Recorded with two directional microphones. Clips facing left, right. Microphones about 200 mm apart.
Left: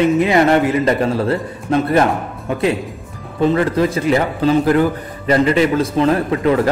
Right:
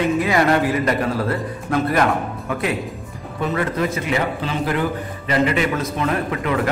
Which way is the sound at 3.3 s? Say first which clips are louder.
Left 7 dB; 30° left (ahead or behind).